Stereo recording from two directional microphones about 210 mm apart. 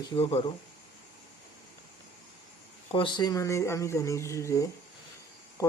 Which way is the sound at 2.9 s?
20° left (ahead or behind).